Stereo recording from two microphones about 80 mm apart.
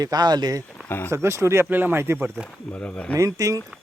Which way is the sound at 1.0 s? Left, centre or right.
Right.